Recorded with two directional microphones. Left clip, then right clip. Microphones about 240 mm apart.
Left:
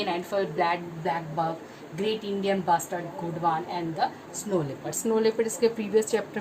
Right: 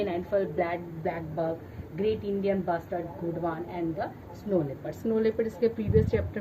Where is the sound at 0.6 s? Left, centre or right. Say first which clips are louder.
Left 4 dB; centre.